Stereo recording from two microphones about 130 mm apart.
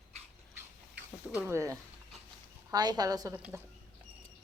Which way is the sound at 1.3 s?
10° right (ahead or behind).